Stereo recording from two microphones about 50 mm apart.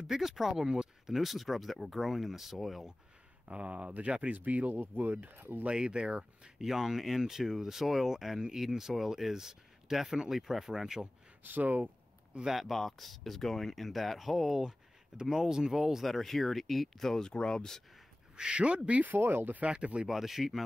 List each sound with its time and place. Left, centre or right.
0.0 s speech: centre
1.1 s speech: centre
3.4 s speech: right
4.4 s speech: right
5.7 s speech: centre
6.6 s speech: centre
11.4 s speech: right
12.5 s speech: centre
14.6 s speech: centre
16.1 s speech: centre
18.3 s speech: centre
19.0 s speech: right
19.6 s speech: right
20.1 s speech: centre